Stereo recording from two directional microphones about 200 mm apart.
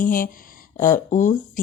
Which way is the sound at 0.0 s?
40° left (ahead or behind).